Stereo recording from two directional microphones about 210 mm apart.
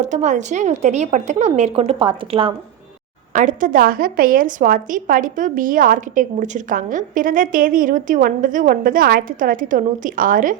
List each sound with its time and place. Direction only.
0.0 s a woman's voice: 35° right (ahead or behind)
3.3 s a woman's voice: 40° right (ahead or behind)